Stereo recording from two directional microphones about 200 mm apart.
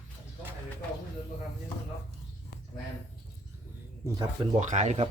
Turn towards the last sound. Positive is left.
turn(degrees=-35)  # may be behind; listen again after turning